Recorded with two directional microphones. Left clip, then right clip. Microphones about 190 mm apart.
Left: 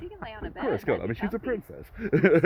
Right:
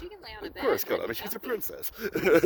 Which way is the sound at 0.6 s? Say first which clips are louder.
Even; 65° right (ahead or behind).